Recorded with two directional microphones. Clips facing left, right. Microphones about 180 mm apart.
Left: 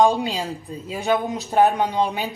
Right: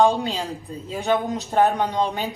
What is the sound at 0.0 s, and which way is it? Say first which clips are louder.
A woman's voice: left 1 dB; 15° left (ahead or behind).